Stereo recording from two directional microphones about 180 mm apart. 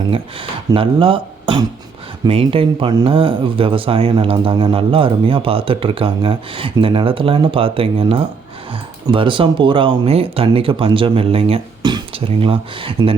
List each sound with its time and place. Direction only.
0.7 s speech: 30° right (ahead or behind)